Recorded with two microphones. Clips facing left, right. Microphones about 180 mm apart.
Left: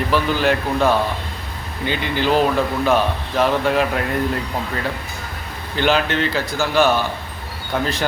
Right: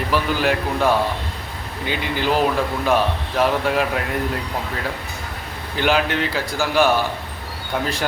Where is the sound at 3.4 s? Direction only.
5° right (ahead or behind).